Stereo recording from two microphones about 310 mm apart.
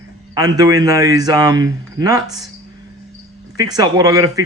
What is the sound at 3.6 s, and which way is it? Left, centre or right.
Speech, centre.